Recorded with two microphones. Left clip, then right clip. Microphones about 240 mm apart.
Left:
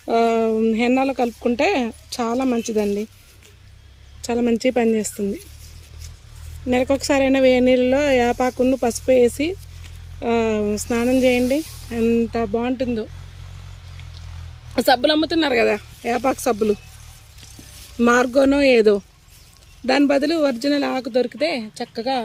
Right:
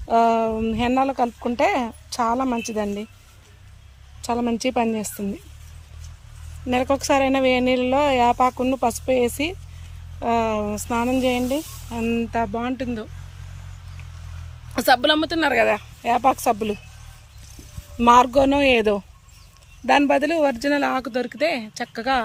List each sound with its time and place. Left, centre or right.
0.1 s speech: centre
4.3 s speech: centre
6.7 s speech: centre
14.8 s speech: centre
16.3 s speech: right
18.1 s speech: right
18.3 s speech: centre